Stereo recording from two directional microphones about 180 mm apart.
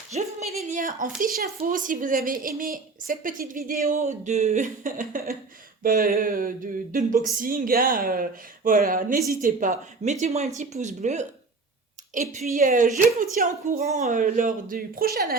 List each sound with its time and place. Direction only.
0.1 s a woman's voice: 40° right (ahead or behind); by 15.4 s 55° right (ahead or behind)